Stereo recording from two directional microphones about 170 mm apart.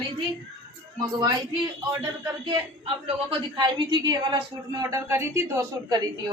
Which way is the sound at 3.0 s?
30° right (ahead or behind).